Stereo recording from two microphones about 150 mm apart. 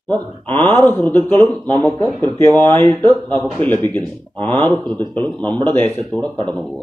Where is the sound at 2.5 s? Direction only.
30° right (ahead or behind).